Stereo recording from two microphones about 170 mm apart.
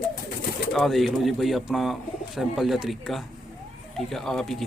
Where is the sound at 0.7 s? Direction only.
Centre (ahead or behind).